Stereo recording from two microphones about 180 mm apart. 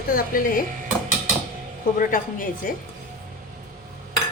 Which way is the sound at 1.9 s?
50° left (ahead or behind).